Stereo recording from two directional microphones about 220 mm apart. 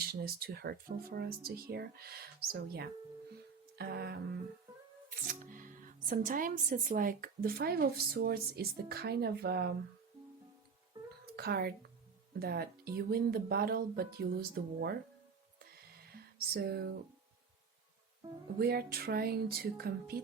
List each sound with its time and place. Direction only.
0.0 s speech: 45° right (ahead or behind)
5.3 s speech: 40° right (ahead or behind)
11.3 s speech: 45° right (ahead or behind)
16.1 s speech: 45° right (ahead or behind)
18.6 s speech: 45° right (ahead or behind)